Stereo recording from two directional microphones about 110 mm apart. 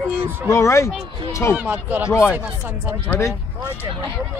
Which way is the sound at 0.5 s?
25° left (ahead or behind).